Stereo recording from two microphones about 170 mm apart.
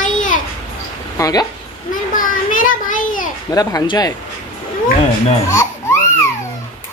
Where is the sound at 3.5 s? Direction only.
25° left (ahead or behind).